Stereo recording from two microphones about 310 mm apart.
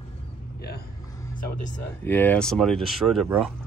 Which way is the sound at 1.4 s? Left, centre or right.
Left.